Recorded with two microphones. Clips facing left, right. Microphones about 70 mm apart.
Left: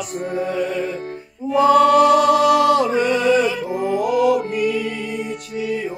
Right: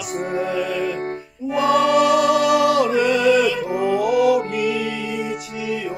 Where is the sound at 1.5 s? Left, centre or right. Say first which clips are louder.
Left 4 dB; right.